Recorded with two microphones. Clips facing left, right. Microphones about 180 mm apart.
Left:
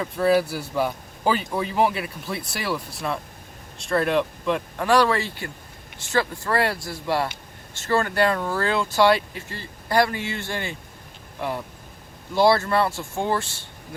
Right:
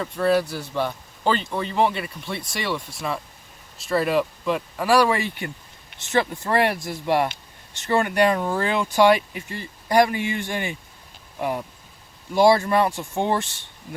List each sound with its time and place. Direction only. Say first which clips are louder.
0.0 s speech: left 1 dB; 5° left (ahead or behind); by 13.6 s 20° right (ahead or behind)